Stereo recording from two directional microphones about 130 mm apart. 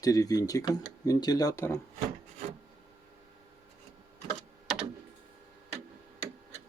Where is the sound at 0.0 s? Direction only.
25° left (ahead or behind).